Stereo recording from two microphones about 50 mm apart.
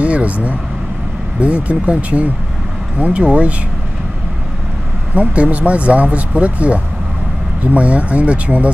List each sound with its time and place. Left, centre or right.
0.0 s speech: right
5.1 s speech: right